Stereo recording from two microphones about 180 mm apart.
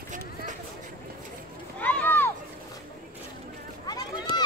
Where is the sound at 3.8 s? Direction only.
25° left (ahead or behind).